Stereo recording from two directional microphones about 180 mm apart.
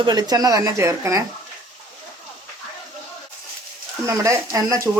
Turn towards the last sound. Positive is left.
turn(degrees=-15)  # may be behind; listen again after turning